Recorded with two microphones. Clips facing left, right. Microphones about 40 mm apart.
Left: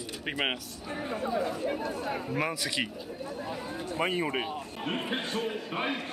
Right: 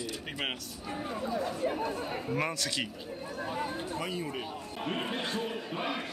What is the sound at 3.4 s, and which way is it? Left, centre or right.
Speech, right.